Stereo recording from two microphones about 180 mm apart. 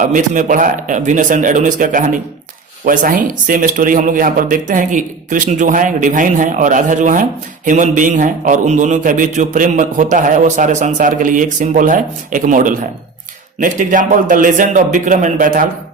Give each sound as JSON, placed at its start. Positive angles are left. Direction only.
{"t": 0.0, "sound": "speech", "side_deg": -45}